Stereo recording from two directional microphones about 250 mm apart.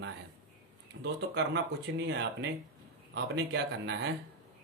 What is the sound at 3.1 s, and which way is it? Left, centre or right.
Speech, right.